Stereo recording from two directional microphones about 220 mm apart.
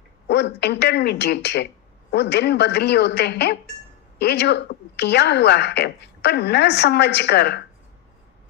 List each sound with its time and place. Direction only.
0.3 s a woman's voice: 50° left (ahead or behind)